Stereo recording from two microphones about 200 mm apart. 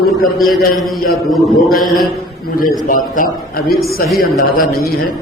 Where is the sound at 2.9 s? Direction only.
45° left (ahead or behind).